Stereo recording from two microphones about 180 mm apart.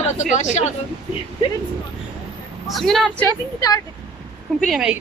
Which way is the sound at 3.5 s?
20° left (ahead or behind).